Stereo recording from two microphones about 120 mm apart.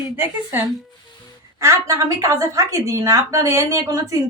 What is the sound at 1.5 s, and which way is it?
A woman's voice, 25° right (ahead or behind).